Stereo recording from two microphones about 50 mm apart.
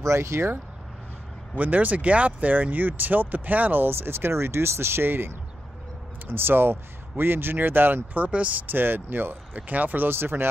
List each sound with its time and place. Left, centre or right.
0.0 s speech: right
1.6 s speech: right
3.9 s speech: right
8.2 s speech: right